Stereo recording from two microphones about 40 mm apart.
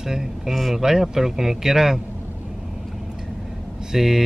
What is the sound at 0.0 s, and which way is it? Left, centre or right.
Speech, centre.